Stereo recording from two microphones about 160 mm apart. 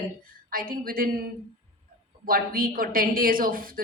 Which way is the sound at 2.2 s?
65° right (ahead or behind).